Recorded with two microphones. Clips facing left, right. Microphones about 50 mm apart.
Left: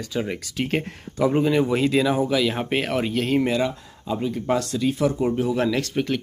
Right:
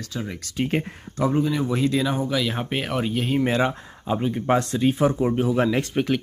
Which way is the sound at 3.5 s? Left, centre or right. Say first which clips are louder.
Right 1 dB; right.